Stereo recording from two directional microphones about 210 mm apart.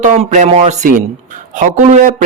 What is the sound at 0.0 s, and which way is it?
A man's voice, 35° right (ahead or behind).